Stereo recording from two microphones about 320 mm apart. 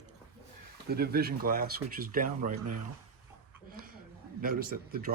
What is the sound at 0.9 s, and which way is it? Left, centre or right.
Speech, right.